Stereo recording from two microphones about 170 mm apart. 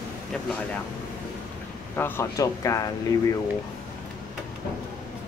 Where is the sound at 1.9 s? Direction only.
10° left (ahead or behind).